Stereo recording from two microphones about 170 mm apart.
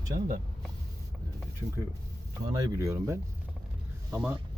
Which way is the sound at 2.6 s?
20° right (ahead or behind).